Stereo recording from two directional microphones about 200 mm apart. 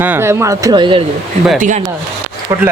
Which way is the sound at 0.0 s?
10° right (ahead or behind).